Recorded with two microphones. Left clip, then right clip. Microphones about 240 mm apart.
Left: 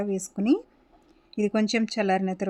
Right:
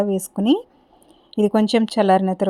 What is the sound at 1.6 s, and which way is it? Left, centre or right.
Speech, centre.